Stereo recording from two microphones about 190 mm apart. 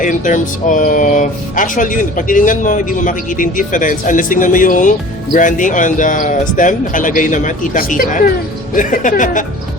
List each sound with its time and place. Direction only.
0.0 s speech: 45° left (ahead or behind)